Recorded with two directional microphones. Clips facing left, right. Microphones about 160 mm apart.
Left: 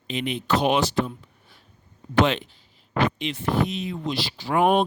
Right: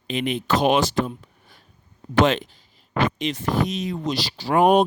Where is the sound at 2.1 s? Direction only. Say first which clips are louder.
Right 2 dB; 45° right (ahead or behind).